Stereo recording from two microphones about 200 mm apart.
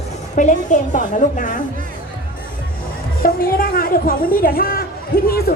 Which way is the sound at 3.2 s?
45° left (ahead or behind).